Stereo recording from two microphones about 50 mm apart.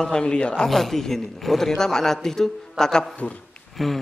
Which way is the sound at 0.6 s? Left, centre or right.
Centre.